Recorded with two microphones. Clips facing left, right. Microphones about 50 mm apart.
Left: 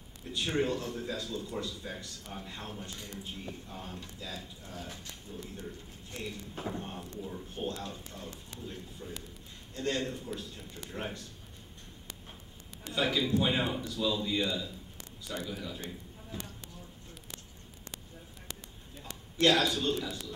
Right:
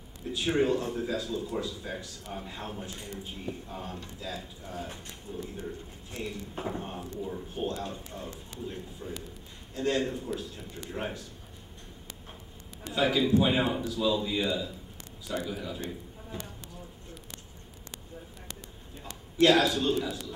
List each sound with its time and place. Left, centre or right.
0.3 s speech: centre
4.7 s speech: right
6.1 s speech: centre
8.6 s a man's voice: centre
12.9 s speech: centre
19.3 s a man's voice: centre